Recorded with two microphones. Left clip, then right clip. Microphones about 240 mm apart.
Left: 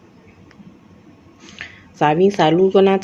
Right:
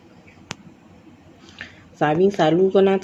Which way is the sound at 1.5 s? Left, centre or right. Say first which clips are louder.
Left 3 dB; centre.